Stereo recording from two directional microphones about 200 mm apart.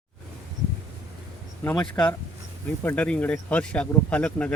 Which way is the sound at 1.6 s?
5° left (ahead or behind).